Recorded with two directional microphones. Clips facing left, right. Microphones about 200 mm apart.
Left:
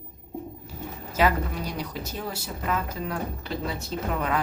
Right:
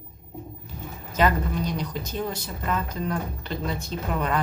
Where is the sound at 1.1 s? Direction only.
5° left (ahead or behind).